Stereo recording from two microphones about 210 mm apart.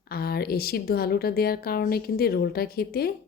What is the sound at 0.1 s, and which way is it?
A woman's voice, 45° left (ahead or behind).